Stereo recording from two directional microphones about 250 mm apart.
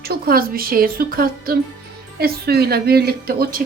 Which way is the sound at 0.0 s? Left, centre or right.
Right.